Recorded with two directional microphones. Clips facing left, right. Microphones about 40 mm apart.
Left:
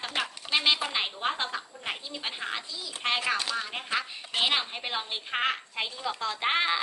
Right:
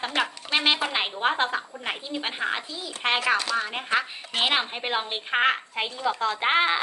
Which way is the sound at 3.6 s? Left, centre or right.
Right.